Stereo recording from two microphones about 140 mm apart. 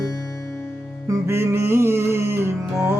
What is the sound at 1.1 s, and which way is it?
Music, 20° right (ahead or behind).